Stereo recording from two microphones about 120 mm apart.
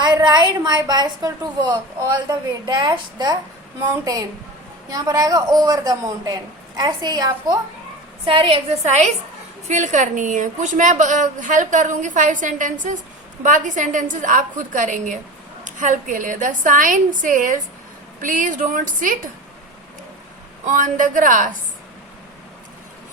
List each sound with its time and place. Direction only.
0.0 s a woman's voice: 35° right (ahead or behind)
8.2 s a woman's voice: 50° right (ahead or behind); by 9.1 s 70° right (ahead or behind)
9.6 s a woman's voice: 90° right
20.7 s a woman's voice: 90° right